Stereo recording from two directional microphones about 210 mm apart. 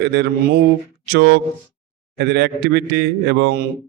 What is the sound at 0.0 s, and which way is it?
A man's voice, 55° right (ahead or behind).